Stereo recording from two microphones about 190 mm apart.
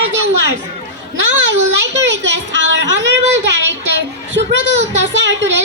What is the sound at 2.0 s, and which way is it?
Speech, 70° right (ahead or behind).